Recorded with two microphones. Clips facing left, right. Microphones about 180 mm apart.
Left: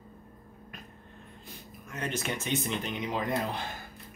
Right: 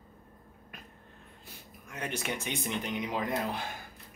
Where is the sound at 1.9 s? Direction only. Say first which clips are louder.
Left 2 dB; 10° right (ahead or behind).